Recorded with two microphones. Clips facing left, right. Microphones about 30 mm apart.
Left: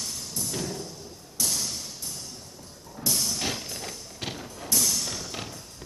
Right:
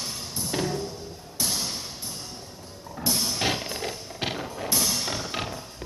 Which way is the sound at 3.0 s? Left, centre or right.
Right.